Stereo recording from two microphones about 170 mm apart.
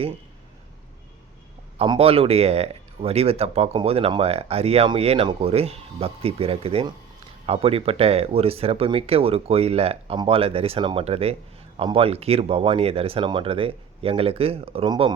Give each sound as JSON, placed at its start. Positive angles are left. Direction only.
{"t": 1.8, "sound": "speech", "side_deg": -35}